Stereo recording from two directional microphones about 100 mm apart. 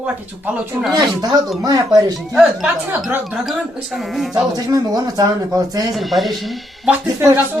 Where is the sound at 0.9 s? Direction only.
40° right (ahead or behind).